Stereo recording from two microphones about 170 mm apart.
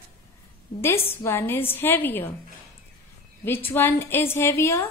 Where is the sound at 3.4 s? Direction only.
10° left (ahead or behind).